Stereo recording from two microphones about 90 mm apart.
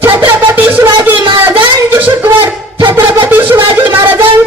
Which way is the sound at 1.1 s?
65° right (ahead or behind).